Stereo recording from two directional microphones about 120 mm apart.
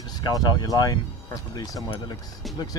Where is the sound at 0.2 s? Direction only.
35° left (ahead or behind).